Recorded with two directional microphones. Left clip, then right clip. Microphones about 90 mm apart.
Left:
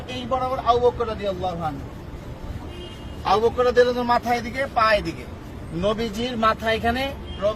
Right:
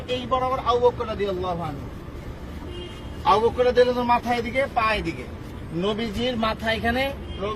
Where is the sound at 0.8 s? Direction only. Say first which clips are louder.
Even; 55° left (ahead or behind).